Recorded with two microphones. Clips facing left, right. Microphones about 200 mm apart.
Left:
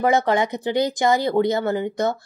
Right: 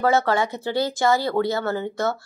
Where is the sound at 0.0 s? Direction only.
15° left (ahead or behind).